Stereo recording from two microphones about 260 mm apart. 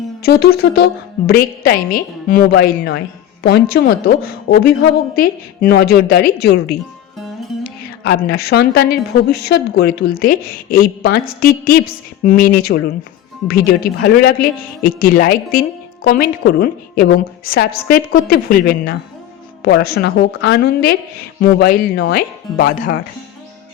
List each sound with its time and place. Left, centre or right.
0.2 s a woman's voice: left
8.0 s a woman's voice: left